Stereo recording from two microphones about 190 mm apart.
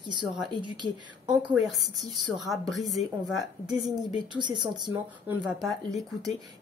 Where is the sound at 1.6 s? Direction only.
Centre (ahead or behind).